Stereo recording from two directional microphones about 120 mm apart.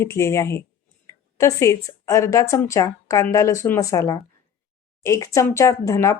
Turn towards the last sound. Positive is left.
turn(degrees=25)  # may be behind; listen again after turning